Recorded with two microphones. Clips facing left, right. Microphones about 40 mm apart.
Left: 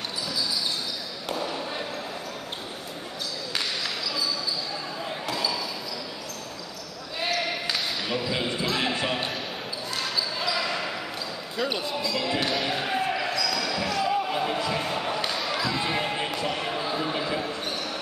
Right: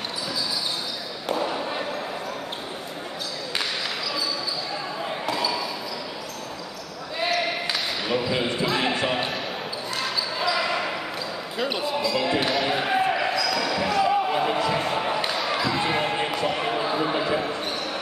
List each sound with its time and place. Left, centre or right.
1.3 s basketball bounce: centre
5.2 s basketball bounce: centre
7.2 s basketball bounce: centre
11.5 s speech: centre
12.6 s basketball bounce: centre